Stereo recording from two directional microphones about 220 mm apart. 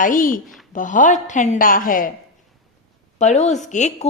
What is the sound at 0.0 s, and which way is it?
Speech, 40° left (ahead or behind).